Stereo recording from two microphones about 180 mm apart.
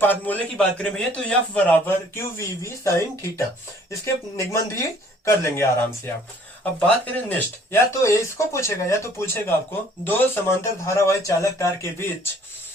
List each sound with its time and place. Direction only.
0.0 s a man's voice: 10° left (ahead or behind)